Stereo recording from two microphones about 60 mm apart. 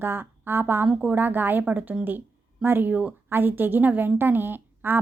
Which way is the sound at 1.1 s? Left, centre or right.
Right.